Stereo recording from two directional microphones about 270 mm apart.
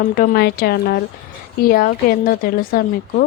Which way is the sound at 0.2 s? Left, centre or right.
Left.